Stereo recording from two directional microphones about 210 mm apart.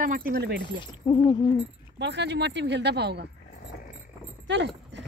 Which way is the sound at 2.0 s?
55° right (ahead or behind).